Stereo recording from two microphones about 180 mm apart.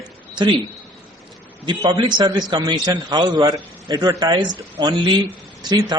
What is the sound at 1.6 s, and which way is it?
A man's voice, 25° right (ahead or behind).